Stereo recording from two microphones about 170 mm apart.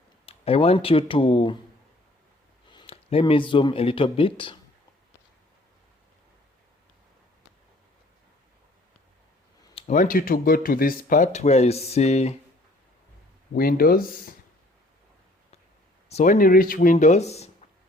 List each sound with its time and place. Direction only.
0.3 s speech: 35° left (ahead or behind)
2.6 s speech: 30° left (ahead or behind)
9.7 s speech: 45° left (ahead or behind)
13.5 s speech: 60° left (ahead or behind)
16.0 s speech: 45° left (ahead or behind)